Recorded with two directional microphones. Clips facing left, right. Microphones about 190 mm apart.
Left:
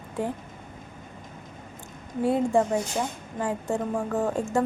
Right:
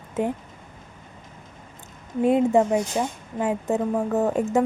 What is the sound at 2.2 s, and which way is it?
A woman's voice, 20° right (ahead or behind).